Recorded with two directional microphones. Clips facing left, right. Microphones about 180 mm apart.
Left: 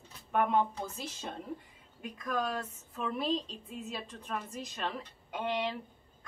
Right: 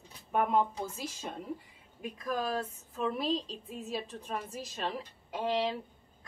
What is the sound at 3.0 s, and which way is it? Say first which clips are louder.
Speech: right 1 dB; centre (ahead or behind).